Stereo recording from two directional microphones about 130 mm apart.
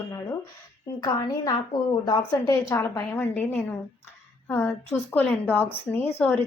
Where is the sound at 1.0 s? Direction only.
30° left (ahead or behind).